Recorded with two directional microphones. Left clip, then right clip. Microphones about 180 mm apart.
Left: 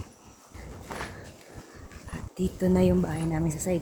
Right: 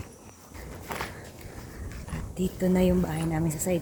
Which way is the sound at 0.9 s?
60° right (ahead or behind).